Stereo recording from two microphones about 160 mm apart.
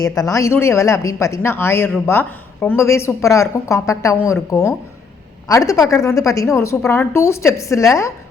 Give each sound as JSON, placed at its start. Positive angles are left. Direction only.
{"t": 0.2, "sound": "a woman's voice", "side_deg": 20}
{"t": 5.5, "sound": "a woman's voice", "side_deg": 20}